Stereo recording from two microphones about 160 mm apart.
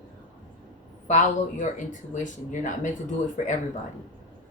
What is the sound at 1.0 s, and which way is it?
Speech, 50° left (ahead or behind).